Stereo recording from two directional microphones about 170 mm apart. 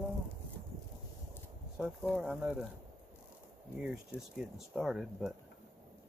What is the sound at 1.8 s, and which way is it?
Speech, 5° right (ahead or behind).